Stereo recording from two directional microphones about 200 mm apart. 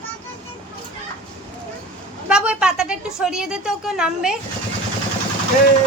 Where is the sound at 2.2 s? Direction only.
5° right (ahead or behind).